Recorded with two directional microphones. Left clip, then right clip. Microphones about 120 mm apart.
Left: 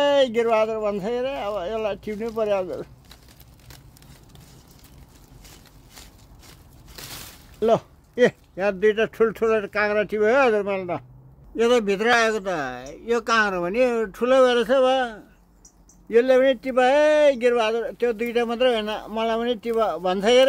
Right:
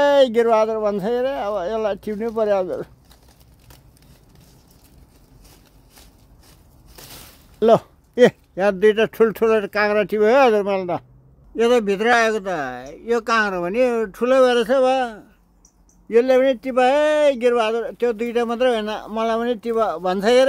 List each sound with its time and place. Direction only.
0.0 s speech: 90° right
8.5 s speech: 90° right
11.5 s speech: 70° right (ahead or behind)